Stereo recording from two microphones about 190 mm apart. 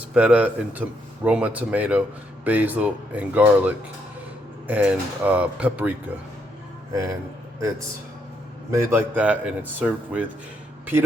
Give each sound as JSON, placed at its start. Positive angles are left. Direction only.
{"t": 0.1, "sound": "a man's voice", "side_deg": -5}
{"t": 6.9, "sound": "a man's voice", "side_deg": -15}
{"t": 8.7, "sound": "a man's voice", "side_deg": -15}